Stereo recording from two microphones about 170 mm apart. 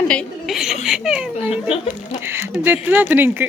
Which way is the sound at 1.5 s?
35° left (ahead or behind).